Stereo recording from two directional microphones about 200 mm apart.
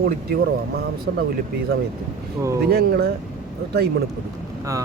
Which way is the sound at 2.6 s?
50° right (ahead or behind).